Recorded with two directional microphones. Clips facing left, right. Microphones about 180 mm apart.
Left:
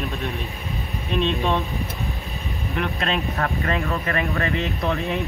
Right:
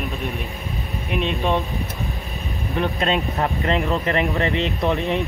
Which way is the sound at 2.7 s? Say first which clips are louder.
Right 4 dB; 20° right (ahead or behind).